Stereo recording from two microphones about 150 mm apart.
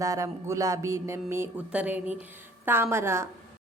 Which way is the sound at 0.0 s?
20° right (ahead or behind).